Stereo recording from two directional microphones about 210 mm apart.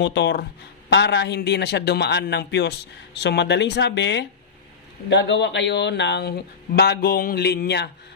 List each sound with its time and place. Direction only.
0.0 s a man's voice: 55° left (ahead or behind)